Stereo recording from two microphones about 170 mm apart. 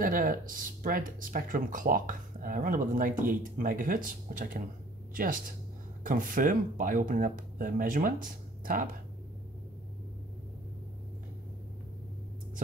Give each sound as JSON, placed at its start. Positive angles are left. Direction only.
{"t": 0.0, "sound": "speech", "side_deg": -55}